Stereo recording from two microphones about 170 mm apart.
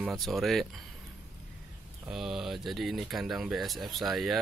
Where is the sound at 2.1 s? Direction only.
Centre (ahead or behind).